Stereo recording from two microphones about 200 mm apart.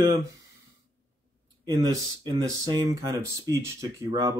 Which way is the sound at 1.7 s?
20° right (ahead or behind).